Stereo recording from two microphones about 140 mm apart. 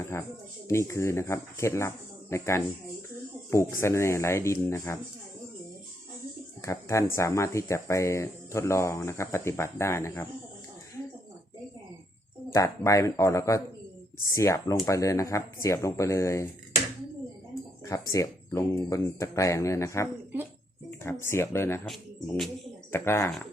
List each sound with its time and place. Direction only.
0.1 s speech: 20° left (ahead or behind)
6.6 s speech: 20° left (ahead or behind)
12.5 s speech: 20° left (ahead or behind)
17.8 s speech: 25° left (ahead or behind)
22.9 s speech: 20° left (ahead or behind)